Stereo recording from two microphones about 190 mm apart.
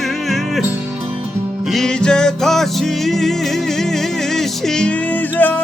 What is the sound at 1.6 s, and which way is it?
Music, centre (ahead or behind).